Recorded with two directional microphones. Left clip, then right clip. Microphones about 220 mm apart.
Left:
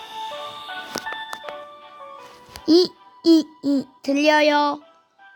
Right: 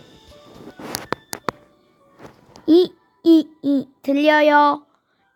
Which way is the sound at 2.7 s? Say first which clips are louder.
Right 2 dB; 5° left (ahead or behind).